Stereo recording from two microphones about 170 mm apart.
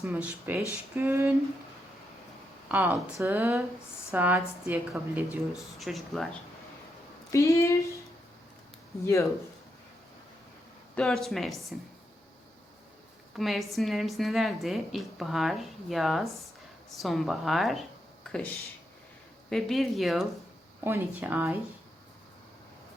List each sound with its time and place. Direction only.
0.0 s a woman's voice: 10° right (ahead or behind)
2.6 s a woman's voice: 10° right (ahead or behind)
7.3 s speech: 20° left (ahead or behind)
10.9 s a woman's voice: centre (ahead or behind)
13.3 s a woman's voice: centre (ahead or behind)
20.8 s a woman's voice: 10° right (ahead or behind)